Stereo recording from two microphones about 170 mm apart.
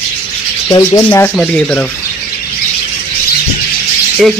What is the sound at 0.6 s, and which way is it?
Rub, 20° left (ahead or behind).